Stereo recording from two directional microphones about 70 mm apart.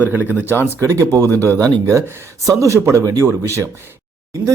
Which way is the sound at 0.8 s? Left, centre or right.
Right.